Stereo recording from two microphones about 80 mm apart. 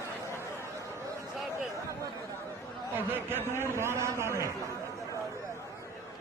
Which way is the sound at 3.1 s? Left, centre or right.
Right.